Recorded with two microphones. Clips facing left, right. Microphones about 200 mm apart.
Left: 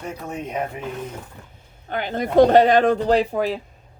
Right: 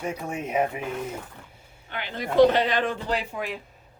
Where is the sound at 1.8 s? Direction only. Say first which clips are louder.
Left 7 dB; 45° left (ahead or behind).